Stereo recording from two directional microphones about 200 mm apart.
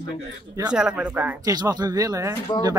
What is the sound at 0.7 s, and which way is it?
Speech, 5° right (ahead or behind).